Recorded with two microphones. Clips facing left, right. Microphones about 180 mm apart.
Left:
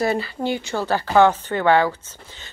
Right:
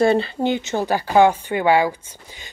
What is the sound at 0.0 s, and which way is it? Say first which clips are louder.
Speech: right 5 dB; 25° right (ahead or behind).